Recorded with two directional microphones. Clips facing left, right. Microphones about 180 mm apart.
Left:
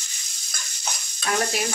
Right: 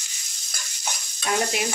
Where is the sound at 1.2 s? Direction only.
15° right (ahead or behind).